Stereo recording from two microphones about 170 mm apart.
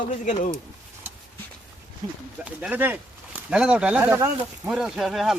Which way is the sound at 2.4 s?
10° right (ahead or behind).